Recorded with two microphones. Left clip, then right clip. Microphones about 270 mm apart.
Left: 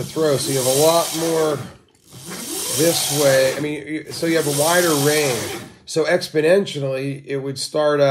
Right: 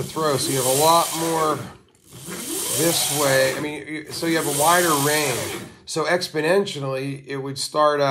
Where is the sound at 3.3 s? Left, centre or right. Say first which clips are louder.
Left 3 dB; right.